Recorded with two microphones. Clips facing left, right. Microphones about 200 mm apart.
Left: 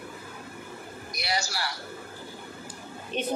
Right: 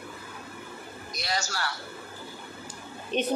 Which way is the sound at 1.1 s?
10° left (ahead or behind).